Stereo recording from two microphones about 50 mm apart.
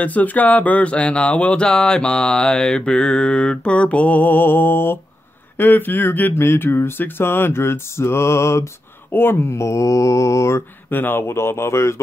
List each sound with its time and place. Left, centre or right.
0.0 s a sound: left
5.6 s speech: left
6.3 s speech: left
9.1 s speech: left
9.5 s mantra: left
10.9 s speech: left